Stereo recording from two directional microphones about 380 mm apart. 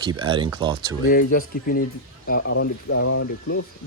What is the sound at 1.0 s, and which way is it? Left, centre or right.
Speech, left.